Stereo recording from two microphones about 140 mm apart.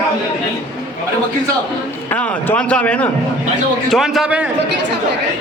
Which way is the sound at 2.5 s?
10° left (ahead or behind).